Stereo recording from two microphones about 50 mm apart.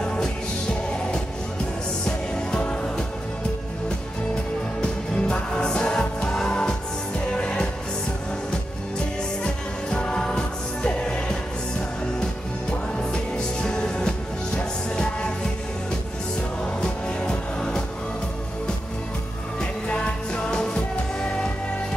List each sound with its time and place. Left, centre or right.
0.0 s music: centre
2.0 s music: centre
4.8 s music: centre
9.4 s music: centre
13.1 s music: centre
16.8 s music: centre
19.6 s music: centre